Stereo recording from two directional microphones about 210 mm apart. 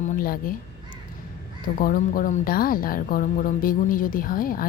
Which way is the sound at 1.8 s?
40° left (ahead or behind).